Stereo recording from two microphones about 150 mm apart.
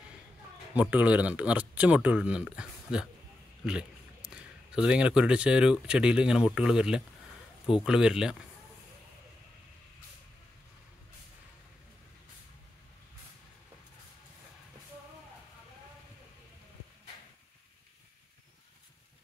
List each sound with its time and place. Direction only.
0.7 s speech: 10° right (ahead or behind)